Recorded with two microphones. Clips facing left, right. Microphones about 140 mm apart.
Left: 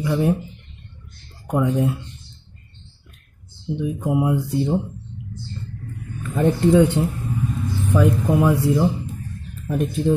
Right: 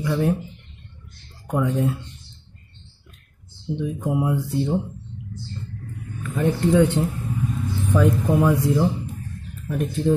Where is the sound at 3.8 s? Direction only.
10° left (ahead or behind).